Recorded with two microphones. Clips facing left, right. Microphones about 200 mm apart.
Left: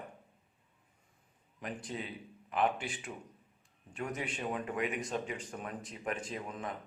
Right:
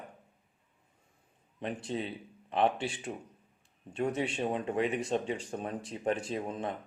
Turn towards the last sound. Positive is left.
turn(degrees=-30)  # may be behind; listen again after turning